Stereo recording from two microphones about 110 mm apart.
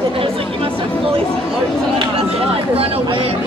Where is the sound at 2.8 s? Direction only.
60° right (ahead or behind).